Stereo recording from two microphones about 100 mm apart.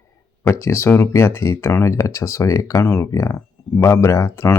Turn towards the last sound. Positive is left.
turn(degrees=30)  # may be behind; listen again after turning